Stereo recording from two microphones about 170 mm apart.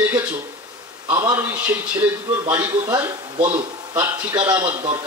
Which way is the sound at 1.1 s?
25° right (ahead or behind).